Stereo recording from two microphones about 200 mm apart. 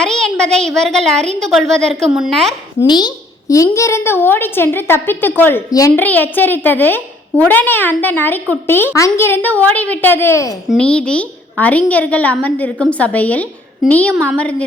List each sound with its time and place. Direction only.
0.0 s a woman's voice: 5° left (ahead or behind)
2.8 s a woman's voice: 20° left (ahead or behind); by 14.5 s 5° left (ahead or behind)